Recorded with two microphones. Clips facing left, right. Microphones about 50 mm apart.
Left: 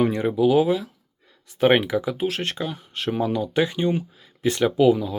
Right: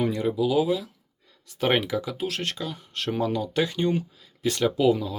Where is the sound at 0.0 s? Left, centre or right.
Left.